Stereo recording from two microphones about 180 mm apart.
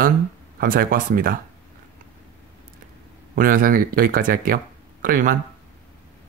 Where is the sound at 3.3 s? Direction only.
50° right (ahead or behind).